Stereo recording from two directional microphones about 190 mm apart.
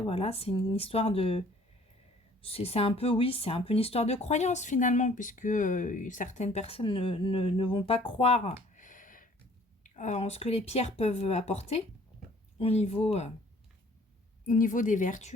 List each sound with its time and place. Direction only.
0.0 s speech: 30° left (ahead or behind)
8.7 s a sound: 45° left (ahead or behind)
9.8 s speech: 40° left (ahead or behind)
14.4 s speech: 45° left (ahead or behind)